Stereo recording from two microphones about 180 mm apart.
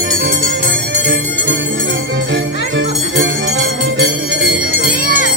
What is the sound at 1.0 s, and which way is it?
Music, 85° right.